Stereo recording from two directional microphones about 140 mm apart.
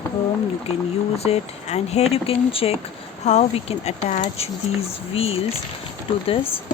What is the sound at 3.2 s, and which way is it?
Speech, 55° left (ahead or behind).